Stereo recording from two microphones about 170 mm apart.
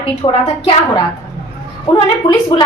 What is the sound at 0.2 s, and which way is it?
Speech, 25° left (ahead or behind).